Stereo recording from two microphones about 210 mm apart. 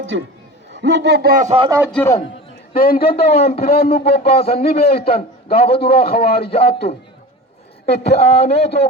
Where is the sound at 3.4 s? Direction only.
30° left (ahead or behind).